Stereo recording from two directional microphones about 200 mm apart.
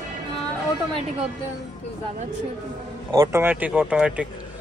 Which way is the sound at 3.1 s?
15° right (ahead or behind).